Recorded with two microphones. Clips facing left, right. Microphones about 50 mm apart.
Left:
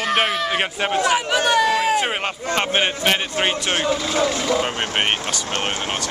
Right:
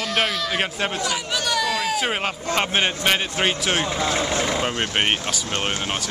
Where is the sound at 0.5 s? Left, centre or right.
Centre.